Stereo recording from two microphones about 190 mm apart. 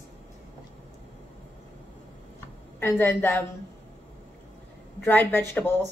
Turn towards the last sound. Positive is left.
turn(degrees=10)  # may be behind; listen again after turning